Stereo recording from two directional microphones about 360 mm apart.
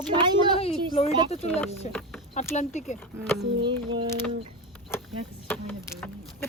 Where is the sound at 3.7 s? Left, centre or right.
Centre.